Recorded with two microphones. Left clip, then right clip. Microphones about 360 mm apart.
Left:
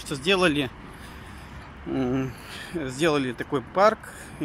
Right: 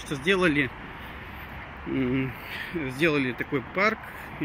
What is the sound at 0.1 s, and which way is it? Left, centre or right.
Speech, centre.